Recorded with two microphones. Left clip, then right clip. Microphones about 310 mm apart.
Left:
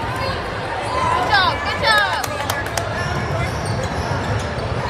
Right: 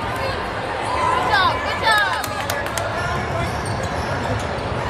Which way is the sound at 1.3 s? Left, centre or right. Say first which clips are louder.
Left 1 dB; left.